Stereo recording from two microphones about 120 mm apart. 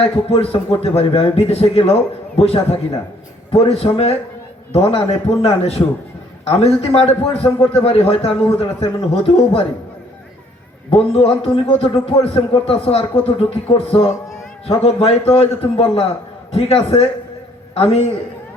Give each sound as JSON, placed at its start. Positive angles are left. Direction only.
{"t": 0.0, "sound": "a man's voice", "side_deg": 55}
{"t": 10.9, "sound": "speech", "side_deg": 55}